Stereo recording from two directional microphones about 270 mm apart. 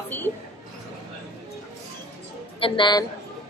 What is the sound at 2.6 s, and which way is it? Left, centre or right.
Speech, centre.